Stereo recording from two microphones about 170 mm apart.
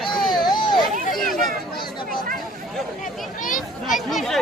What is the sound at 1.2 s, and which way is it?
Speech, centre (ahead or behind).